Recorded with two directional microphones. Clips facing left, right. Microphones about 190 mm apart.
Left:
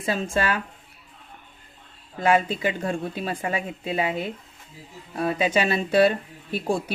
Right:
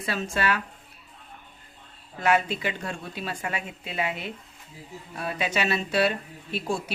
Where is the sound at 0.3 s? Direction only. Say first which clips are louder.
Left 1 dB; 30° left (ahead or behind).